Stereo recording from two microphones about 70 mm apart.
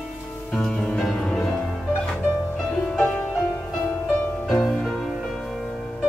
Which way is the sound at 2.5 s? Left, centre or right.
Centre.